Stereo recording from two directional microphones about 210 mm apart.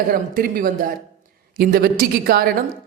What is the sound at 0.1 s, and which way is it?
A man's voice, 40° right (ahead or behind).